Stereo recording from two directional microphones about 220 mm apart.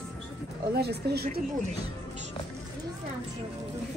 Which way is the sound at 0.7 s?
45° right (ahead or behind).